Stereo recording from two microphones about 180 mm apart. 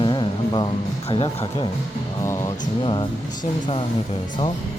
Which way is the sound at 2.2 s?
15° left (ahead or behind).